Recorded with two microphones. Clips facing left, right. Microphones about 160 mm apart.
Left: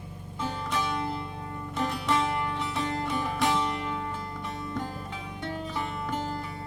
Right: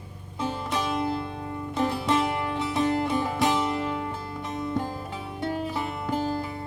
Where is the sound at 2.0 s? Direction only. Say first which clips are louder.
Right 2 dB; 20° right (ahead or behind).